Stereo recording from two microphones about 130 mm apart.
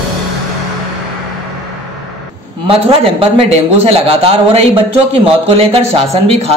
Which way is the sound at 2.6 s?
45° right (ahead or behind).